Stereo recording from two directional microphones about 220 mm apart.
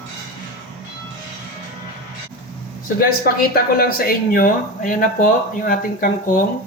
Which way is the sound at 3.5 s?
45° left (ahead or behind).